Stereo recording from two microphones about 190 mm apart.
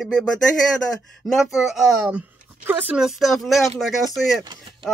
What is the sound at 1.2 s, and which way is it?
Speech, centre (ahead or behind).